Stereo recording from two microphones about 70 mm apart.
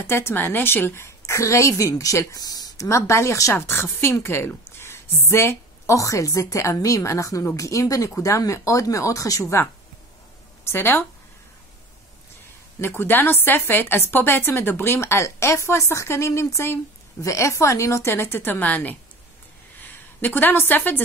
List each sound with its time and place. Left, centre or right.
0.0 s a woman's voice: left
2.9 s a woman's voice: left
3.5 s a woman's voice: left
4.6 s a sound: left
5.9 s a woman's voice: left
10.6 s a woman's voice: left
12.8 s a woman's voice: left
17.2 s a woman's voice: left
20.2 s a woman's voice: left